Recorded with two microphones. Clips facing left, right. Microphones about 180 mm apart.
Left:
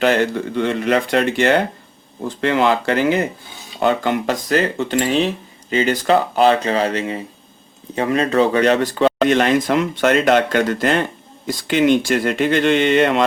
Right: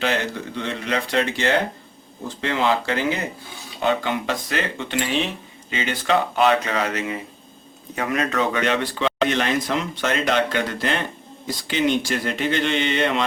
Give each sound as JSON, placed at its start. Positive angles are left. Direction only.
{"t": 0.5, "sound": "speech", "side_deg": 55}